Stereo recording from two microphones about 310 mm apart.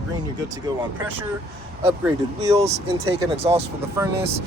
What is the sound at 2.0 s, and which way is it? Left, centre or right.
Speech, centre.